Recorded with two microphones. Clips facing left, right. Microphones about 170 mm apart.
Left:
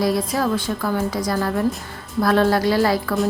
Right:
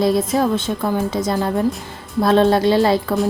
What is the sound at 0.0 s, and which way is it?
A woman's voice, 25° right (ahead or behind).